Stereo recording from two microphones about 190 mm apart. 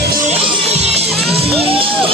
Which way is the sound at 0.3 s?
35° right (ahead or behind).